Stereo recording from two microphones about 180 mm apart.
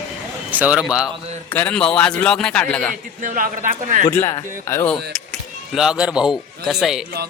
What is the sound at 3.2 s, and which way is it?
Speech, 45° right (ahead or behind).